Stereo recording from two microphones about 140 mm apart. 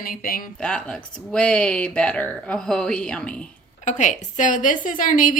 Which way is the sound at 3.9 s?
60° left (ahead or behind).